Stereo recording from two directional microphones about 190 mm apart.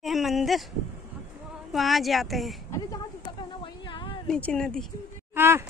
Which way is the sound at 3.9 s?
25° left (ahead or behind).